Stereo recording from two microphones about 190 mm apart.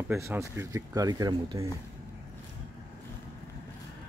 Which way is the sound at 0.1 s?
15° right (ahead or behind).